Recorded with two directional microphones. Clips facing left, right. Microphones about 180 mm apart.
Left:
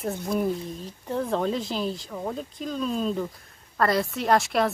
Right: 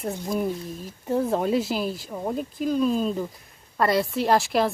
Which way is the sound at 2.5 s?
5° right (ahead or behind).